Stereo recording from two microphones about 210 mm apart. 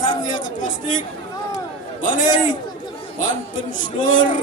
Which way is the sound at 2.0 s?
35° left (ahead or behind).